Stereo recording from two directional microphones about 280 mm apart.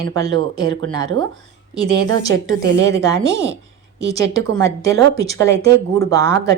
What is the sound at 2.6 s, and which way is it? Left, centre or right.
Speech, right.